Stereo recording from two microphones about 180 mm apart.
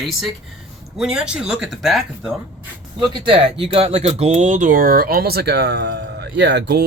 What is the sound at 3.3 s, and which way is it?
Speech, 30° right (ahead or behind).